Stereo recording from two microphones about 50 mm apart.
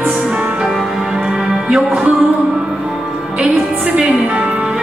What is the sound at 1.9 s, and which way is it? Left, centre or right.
Music, right.